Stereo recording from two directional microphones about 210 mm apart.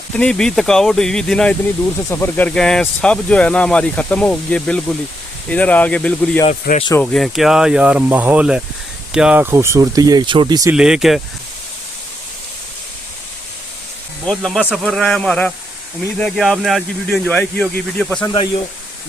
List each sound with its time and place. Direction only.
0.1 s speech: 5° left (ahead or behind)
6.5 s speech: 35° left (ahead or behind)
7.0 s speech: centre (ahead or behind); by 10.8 s 15° right (ahead or behind)
10.8 s speech: 5° right (ahead or behind)
14.3 s speech: centre (ahead or behind)